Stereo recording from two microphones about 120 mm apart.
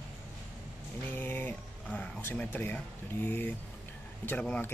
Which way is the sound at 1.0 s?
15° left (ahead or behind).